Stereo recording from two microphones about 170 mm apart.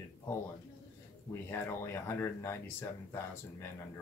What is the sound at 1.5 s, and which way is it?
Speech, 15° left (ahead or behind).